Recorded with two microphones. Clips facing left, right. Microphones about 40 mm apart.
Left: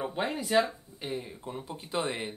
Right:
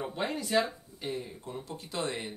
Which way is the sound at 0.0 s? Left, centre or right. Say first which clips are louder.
Left 2 dB; centre.